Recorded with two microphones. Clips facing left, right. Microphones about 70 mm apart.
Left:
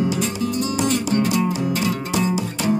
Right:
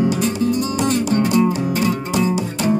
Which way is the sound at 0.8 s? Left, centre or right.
Right.